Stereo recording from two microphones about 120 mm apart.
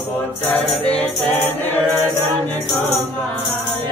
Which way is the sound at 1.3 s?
15° left (ahead or behind).